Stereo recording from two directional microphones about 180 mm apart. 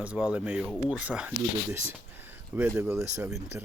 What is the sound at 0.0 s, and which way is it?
Speech, 5° right (ahead or behind).